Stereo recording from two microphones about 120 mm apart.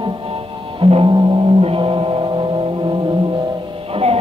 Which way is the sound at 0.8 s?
50° right (ahead or behind).